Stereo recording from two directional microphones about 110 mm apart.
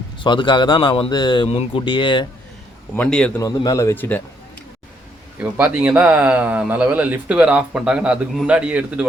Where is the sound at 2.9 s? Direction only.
10° left (ahead or behind).